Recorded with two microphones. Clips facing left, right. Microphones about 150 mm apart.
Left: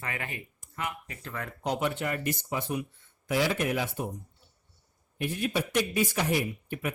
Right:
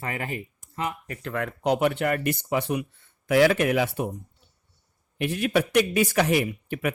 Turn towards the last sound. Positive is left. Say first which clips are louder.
# right 5 dB
turn(degrees=-80)